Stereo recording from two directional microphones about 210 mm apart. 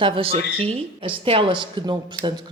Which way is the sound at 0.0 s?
25° right (ahead or behind).